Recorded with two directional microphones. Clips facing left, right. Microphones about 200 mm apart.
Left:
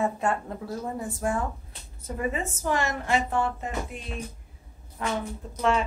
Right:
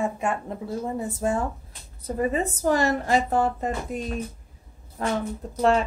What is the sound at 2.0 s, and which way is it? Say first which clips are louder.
Speech: right 5 dB; 35° right (ahead or behind).